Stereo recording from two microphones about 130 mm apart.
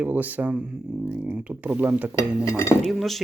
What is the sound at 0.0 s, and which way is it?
Speech, 15° right (ahead or behind).